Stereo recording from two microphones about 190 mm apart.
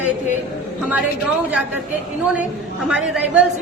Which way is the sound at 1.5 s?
10° right (ahead or behind).